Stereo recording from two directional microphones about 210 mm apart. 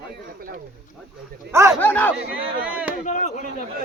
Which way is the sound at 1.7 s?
10° left (ahead or behind).